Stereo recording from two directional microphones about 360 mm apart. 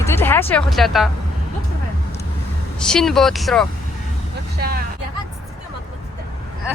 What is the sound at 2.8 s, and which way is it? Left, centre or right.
Speech, centre.